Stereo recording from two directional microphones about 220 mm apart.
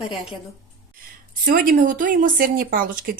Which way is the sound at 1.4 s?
40° right (ahead or behind).